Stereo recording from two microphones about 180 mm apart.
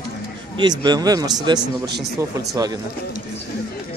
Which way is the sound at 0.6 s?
25° right (ahead or behind).